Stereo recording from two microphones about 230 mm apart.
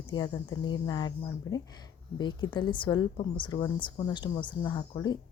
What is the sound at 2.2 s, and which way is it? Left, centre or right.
A woman's voice, centre.